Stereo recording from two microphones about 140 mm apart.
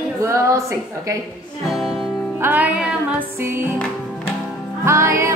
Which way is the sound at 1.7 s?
Centre (ahead or behind).